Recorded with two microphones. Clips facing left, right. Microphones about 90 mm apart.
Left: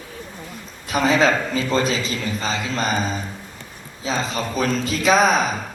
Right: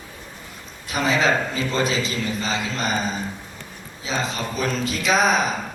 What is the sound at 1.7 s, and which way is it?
Speech, 35° left (ahead or behind).